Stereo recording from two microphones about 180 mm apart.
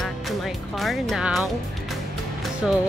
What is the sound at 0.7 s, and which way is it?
Speech, centre (ahead or behind).